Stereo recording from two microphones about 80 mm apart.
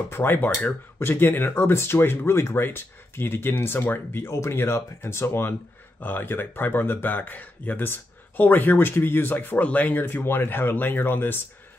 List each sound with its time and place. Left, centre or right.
0.1 s speech: left